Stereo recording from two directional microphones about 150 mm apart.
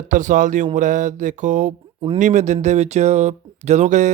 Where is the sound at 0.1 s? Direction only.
60° right (ahead or behind).